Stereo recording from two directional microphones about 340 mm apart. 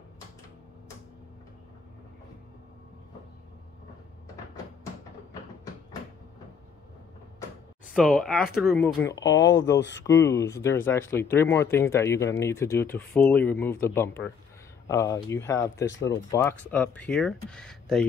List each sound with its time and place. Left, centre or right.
7.9 s speech: centre
9.2 s speech: left
10.0 s speech: centre
15.9 s speech: left
16.3 s speech: centre